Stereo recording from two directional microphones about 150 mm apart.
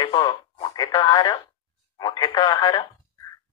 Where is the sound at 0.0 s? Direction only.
30° left (ahead or behind).